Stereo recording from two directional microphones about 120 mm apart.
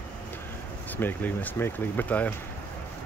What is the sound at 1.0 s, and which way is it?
Speech, 15° left (ahead or behind).